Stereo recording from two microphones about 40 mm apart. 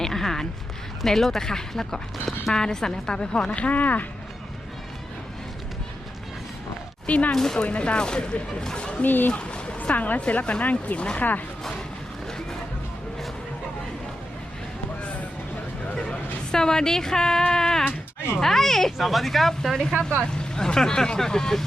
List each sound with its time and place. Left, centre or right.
0.0 s a sound: centre
1.0 s speech: centre; by 4.0 s left
7.1 s speech: left
7.3 s speech: centre
7.6 s speech: left
9.0 s a woman's voice: left
16.0 s speech: centre
17.5 s a sound: centre
18.3 s speech: centre